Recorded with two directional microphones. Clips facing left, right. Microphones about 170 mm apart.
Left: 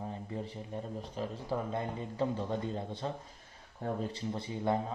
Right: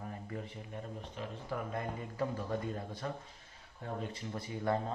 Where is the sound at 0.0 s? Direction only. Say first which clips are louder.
Left 3 dB; 25° left (ahead or behind).